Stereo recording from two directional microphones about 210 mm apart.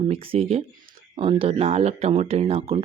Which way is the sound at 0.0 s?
25° right (ahead or behind).